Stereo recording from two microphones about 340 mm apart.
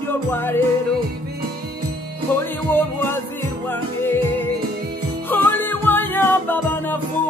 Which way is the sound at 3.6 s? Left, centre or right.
Centre.